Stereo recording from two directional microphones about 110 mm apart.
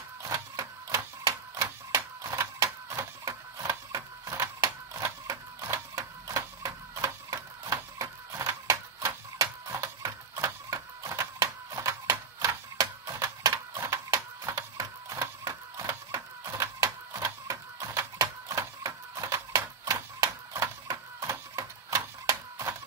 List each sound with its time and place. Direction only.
0.2 s printer: 30° right (ahead or behind)
16.8 s typewriter: 30° right (ahead or behind)